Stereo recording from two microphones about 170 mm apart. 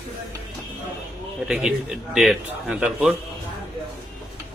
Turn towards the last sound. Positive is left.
turn(degrees=-5)  # may be behind; listen again after turning